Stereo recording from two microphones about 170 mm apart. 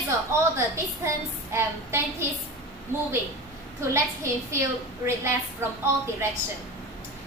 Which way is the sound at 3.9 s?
15° right (ahead or behind).